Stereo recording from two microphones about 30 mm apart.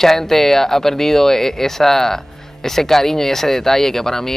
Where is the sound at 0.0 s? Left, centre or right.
Centre.